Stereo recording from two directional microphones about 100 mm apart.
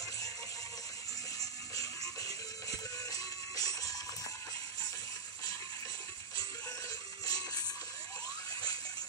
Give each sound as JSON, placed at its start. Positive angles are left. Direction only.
{"t": 1.4, "sound": "music", "side_deg": 35}
{"t": 7.2, "sound": "music", "side_deg": 40}